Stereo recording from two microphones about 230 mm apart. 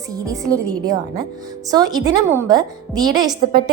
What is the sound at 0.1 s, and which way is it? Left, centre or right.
A woman's voice, centre.